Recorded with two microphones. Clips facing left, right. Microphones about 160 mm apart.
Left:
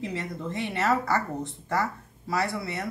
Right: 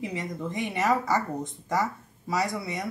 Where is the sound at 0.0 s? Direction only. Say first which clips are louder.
Even; 15° right (ahead or behind).